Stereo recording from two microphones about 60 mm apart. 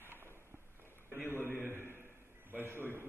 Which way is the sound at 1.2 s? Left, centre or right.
Left.